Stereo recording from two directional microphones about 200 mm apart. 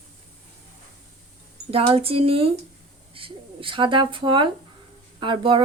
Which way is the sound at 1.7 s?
30° right (ahead or behind).